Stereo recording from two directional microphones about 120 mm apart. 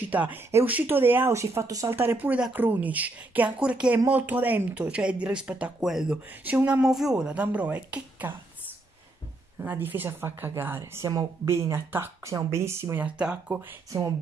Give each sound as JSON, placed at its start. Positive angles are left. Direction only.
{"t": 0.0, "sound": "speech", "side_deg": -15}
{"t": 9.6, "sound": "speech", "side_deg": -15}
{"t": 13.0, "sound": "speech", "side_deg": -10}